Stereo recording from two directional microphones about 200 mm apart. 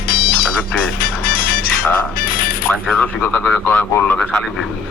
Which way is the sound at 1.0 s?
45° left (ahead or behind).